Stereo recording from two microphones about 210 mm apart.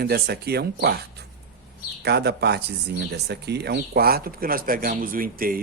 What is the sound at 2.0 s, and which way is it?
Speech, 50° right (ahead or behind).